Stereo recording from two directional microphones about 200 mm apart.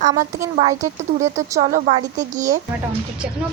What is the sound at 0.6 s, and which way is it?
Speech, 35° right (ahead or behind).